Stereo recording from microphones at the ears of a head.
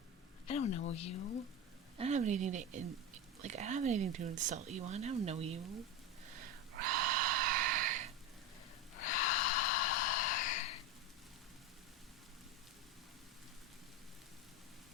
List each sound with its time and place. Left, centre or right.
0.4 s speech: left
2.1 s speech: right
6.3 s a sound: right
9.0 s snort: left